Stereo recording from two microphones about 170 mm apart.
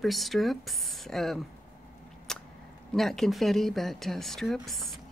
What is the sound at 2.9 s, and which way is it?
Speech, centre (ahead or behind).